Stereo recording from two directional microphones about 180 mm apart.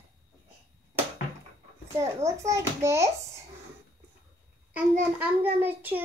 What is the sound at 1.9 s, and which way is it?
A child's voice, 15° right (ahead or behind).